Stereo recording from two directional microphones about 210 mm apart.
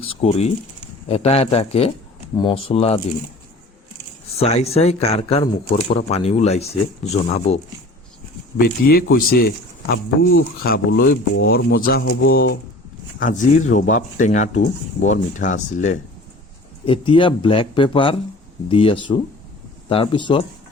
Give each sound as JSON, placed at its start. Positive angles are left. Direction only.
{"t": 0.0, "sound": "speech", "side_deg": 25}
{"t": 4.4, "sound": "speech", "side_deg": 30}
{"t": 8.5, "sound": "speech", "side_deg": 45}
{"t": 16.8, "sound": "speech", "side_deg": 25}